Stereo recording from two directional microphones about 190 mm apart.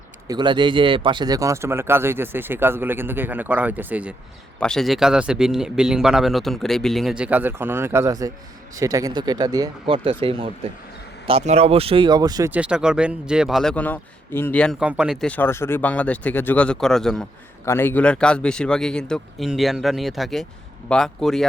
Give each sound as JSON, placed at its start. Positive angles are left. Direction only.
{"t": 0.3, "sound": "speech", "side_deg": -25}
{"t": 4.6, "sound": "speech", "side_deg": 0}
{"t": 12.5, "sound": "speech", "side_deg": -5}